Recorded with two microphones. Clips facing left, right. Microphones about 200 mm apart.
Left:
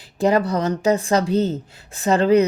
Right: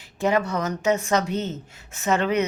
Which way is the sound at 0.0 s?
35° left (ahead or behind).